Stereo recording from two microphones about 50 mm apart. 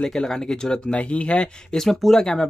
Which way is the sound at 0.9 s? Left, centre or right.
Left.